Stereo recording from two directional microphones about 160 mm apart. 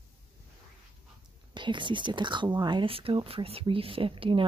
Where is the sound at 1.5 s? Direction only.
30° right (ahead or behind).